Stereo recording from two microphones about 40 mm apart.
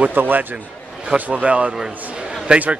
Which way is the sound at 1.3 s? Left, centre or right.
Right.